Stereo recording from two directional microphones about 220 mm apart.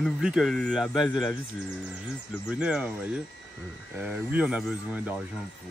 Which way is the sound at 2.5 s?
5° right (ahead or behind).